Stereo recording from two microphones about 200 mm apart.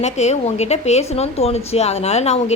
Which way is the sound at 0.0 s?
35° left (ahead or behind).